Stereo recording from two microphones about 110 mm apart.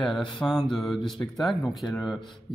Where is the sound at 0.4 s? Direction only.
5° left (ahead or behind).